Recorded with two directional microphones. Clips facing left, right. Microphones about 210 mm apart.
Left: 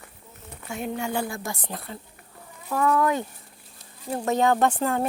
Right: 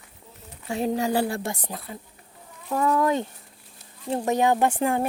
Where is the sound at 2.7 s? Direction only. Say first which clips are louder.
Even; 25° right (ahead or behind).